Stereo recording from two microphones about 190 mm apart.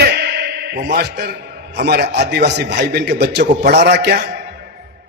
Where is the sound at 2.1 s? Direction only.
60° right (ahead or behind).